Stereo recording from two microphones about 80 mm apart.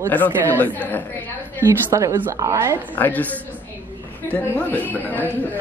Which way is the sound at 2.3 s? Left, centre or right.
Right.